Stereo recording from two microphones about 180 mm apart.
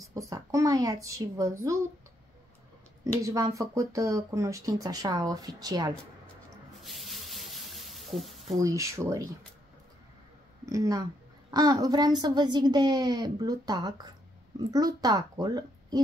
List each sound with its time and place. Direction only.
0.1 s speech: 20° right (ahead or behind)
3.0 s speech: 20° right (ahead or behind)
6.8 s sink: centre (ahead or behind)
8.5 s speech: 15° right (ahead or behind)
10.6 s speech: 20° right (ahead or behind)